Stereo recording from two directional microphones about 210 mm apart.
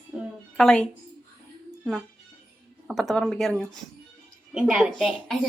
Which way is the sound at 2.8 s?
Centre (ahead or behind).